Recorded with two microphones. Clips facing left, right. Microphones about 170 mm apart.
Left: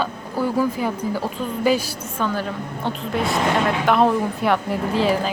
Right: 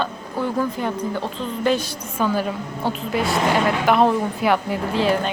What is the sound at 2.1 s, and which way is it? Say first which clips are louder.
A woman's voice: right 3 dB; 10° right (ahead or behind).